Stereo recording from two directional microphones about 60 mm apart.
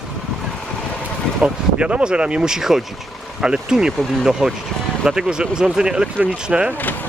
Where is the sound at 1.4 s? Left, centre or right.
Centre.